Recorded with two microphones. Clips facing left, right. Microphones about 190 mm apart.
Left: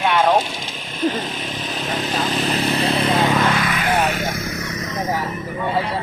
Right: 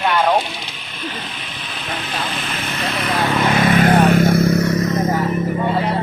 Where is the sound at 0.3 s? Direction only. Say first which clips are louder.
Even; 45° left (ahead or behind); by 3.3 s 25° left (ahead or behind).